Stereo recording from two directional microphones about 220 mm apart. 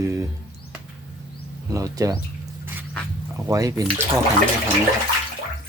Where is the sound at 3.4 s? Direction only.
15° right (ahead or behind).